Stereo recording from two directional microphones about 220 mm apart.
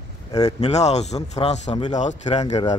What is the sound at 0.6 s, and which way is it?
A man's voice, 30° left (ahead or behind).